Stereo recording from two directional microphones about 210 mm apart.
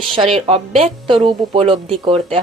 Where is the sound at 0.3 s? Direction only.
30° right (ahead or behind).